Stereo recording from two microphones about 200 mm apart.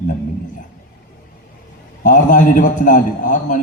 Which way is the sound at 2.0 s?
40° left (ahead or behind).